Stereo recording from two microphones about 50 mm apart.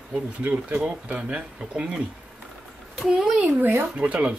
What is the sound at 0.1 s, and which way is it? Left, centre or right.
Speech, right.